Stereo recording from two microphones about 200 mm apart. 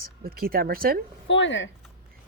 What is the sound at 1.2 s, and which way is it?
Speech, 65° left (ahead or behind).